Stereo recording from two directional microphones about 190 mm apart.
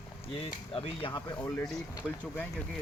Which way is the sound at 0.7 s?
30° left (ahead or behind).